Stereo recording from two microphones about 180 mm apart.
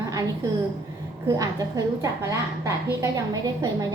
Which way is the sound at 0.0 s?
20° right (ahead or behind).